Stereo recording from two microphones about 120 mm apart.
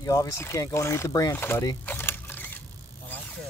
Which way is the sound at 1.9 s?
15° left (ahead or behind).